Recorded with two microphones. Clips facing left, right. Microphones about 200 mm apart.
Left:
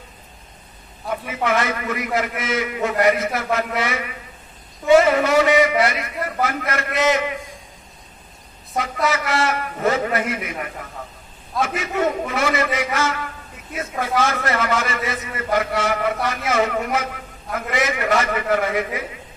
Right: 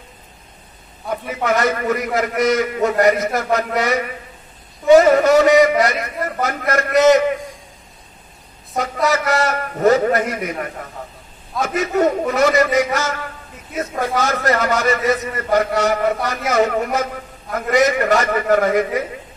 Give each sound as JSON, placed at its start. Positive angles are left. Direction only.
{"t": 1.2, "sound": "a man's voice", "side_deg": -40}
{"t": 8.7, "sound": "a man's voice", "side_deg": -40}